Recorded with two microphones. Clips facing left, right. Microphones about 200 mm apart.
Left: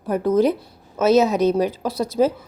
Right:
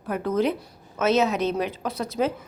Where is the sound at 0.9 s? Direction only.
40° left (ahead or behind).